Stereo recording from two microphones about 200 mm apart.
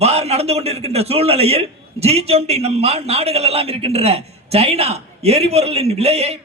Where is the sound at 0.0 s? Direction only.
30° right (ahead or behind).